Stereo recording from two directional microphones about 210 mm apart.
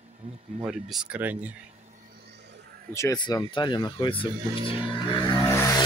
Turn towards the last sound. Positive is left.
turn(degrees=15)  # may be behind; listen again after turning